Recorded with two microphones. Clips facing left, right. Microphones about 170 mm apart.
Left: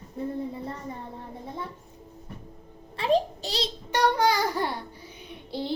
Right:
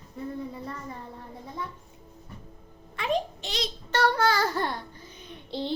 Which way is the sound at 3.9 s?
15° left (ahead or behind).